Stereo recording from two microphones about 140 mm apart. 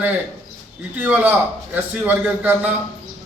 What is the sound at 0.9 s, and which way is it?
A man's voice, 10° right (ahead or behind).